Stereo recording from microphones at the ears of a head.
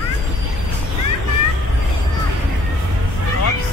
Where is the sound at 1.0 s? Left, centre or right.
Left.